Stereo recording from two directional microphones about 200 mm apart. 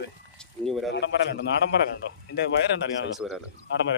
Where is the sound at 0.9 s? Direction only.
60° left (ahead or behind).